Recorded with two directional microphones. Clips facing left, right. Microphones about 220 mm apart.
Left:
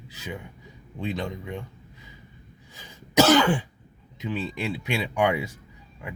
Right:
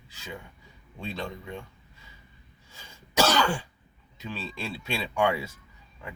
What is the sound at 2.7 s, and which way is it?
Throat clearing, 20° left (ahead or behind).